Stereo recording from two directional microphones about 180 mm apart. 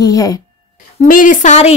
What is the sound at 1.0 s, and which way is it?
Speech, 45° left (ahead or behind).